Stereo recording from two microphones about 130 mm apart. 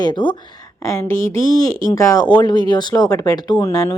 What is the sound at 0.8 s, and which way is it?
Speech, 25° left (ahead or behind).